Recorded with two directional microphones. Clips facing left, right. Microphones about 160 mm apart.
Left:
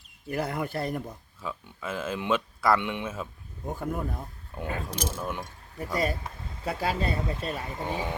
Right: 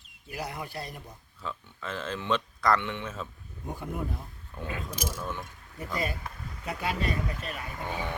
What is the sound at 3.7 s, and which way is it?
Speech, 50° left (ahead or behind).